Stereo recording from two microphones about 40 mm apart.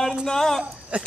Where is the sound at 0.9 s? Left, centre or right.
Right.